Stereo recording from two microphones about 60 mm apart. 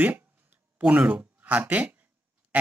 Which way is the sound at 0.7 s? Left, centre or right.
Right.